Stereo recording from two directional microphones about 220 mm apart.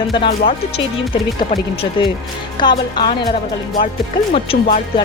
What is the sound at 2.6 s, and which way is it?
Speech, 20° left (ahead or behind).